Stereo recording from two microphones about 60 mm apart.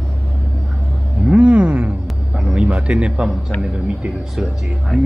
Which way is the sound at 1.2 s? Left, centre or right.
Centre.